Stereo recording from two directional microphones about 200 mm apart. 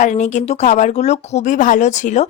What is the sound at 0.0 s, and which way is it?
Speech, 35° left (ahead or behind).